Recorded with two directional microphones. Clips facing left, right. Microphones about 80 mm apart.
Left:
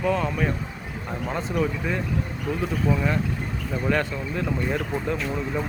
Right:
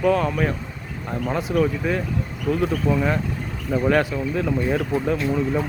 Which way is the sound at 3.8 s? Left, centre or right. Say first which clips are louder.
Right 5 dB; centre.